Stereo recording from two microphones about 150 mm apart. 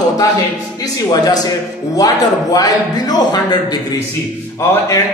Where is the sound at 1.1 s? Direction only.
25° left (ahead or behind).